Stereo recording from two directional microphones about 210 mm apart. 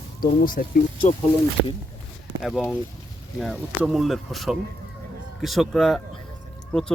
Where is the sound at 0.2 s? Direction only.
40° left (ahead or behind).